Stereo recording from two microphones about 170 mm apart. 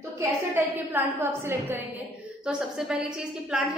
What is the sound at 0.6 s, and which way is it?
A woman's voice, 10° right (ahead or behind).